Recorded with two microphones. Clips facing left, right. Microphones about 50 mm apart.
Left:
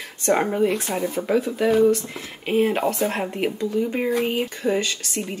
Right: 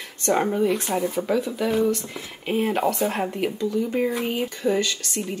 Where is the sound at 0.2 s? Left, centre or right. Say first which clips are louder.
Left 1 dB; centre.